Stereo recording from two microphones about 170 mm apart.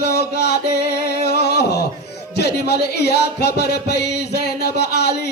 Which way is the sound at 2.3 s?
75° left (ahead or behind).